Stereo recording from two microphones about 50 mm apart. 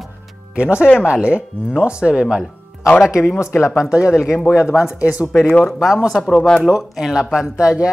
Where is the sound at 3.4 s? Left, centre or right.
Left.